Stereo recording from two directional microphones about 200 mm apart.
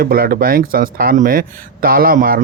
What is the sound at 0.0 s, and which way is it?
Speech, 45° right (ahead or behind).